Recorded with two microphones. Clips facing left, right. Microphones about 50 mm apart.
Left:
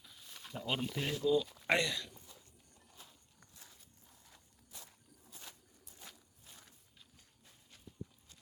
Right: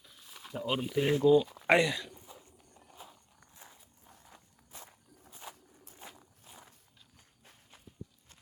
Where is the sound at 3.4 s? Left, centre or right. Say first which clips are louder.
Right 5 dB; right.